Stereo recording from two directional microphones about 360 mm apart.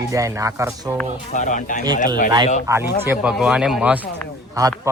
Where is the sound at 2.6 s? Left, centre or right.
Centre.